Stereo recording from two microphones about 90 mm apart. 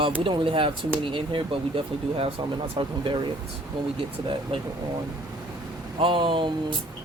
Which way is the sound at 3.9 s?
85° right.